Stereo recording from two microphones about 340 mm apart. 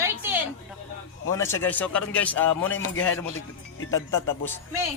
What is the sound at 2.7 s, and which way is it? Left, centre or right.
Speech, left.